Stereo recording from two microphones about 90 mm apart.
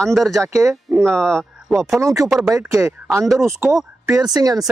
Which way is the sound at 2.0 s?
35° right (ahead or behind).